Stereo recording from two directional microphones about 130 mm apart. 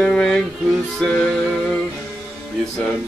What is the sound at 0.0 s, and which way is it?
Music, 5° left (ahead or behind).